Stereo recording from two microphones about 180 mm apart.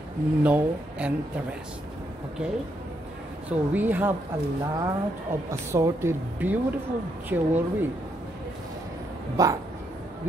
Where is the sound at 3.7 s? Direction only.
10° right (ahead or behind).